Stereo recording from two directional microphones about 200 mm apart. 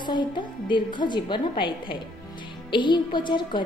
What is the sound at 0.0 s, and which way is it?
A woman's voice, 20° left (ahead or behind).